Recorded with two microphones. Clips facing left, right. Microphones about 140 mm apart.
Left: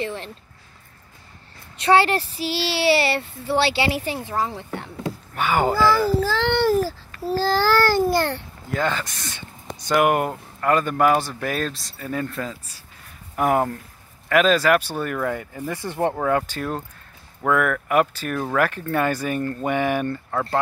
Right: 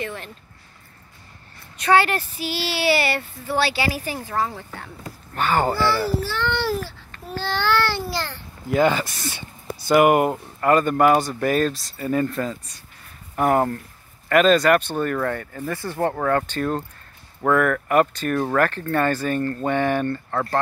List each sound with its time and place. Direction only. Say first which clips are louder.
0.0 s a sound: left 2 dB; 30° left (ahead or behind)
1.8 s speech: left 1 dB; 30° left (ahead or behind)
5.3 s speech: even; 10° left (ahead or behind)
6.3 s speech: left 3 dB; 90° left
6.6 s speech: left 6 dB; 40° left (ahead or behind); by 8.5 s 60° left (ahead or behind)
8.6 s speech: right 6 dB; 15° right (ahead or behind); by 20.4 s 5° left (ahead or behind)